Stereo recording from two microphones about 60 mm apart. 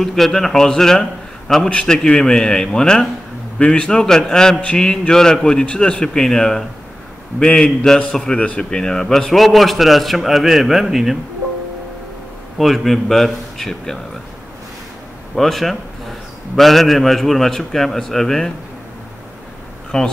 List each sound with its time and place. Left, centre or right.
0.0 s a man's voice: centre
12.5 s a man's voice: centre
15.3 s a man's voice: centre
19.9 s a man's voice: centre